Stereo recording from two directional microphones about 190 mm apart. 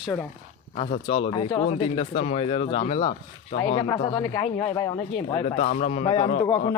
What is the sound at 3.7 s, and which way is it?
Speech, 20° left (ahead or behind).